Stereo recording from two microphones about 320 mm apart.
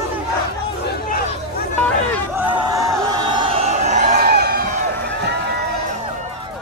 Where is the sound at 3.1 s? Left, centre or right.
Centre; by 5.7 s right.